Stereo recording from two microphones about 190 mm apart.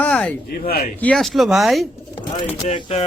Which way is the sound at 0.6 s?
50° left (ahead or behind).